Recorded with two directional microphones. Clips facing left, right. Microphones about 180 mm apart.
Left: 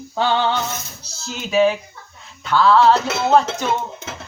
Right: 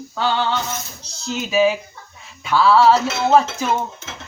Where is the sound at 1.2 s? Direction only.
Centre (ahead or behind).